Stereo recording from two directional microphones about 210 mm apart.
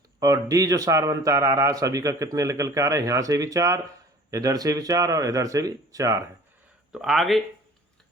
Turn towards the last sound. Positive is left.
turn(degrees=0)  # may be behind; listen again after turning